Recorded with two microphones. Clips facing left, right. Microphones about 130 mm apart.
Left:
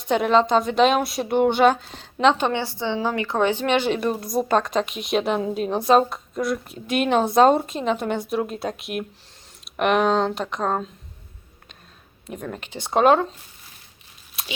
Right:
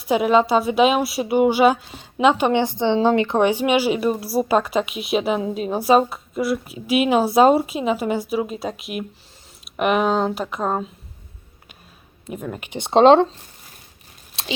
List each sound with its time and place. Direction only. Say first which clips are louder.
0.0 s a woman's voice: right 2 dB; 5° right (ahead or behind)
12.3 s speech: right 3 dB; 5° right (ahead or behind); by 13.2 s 25° right (ahead or behind)
14.4 s a sound: right 6 dB; 30° right (ahead or behind)